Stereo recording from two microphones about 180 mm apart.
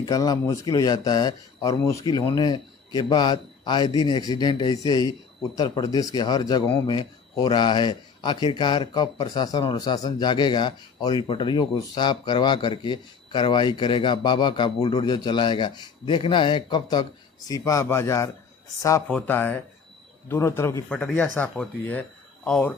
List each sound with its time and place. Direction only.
0.0 s a man's voice: 20° left (ahead or behind)